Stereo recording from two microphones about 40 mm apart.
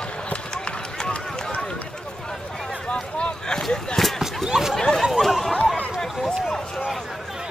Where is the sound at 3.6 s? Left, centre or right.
Centre.